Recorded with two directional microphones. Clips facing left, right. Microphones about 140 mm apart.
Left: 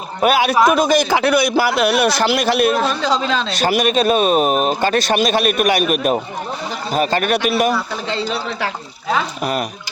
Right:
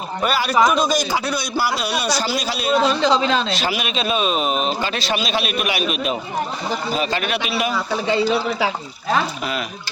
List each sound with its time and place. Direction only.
0.2 s a man's voice: 55° left (ahead or behind)
2.8 s speech: 15° right (ahead or behind)
3.6 s a man's voice: 45° left (ahead or behind)
8.0 s speech: 10° right (ahead or behind)